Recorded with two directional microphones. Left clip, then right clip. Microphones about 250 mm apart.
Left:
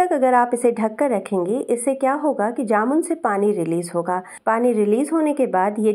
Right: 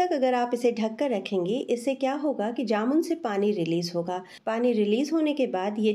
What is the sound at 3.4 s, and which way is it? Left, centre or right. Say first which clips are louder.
Speech: left 6 dB; left.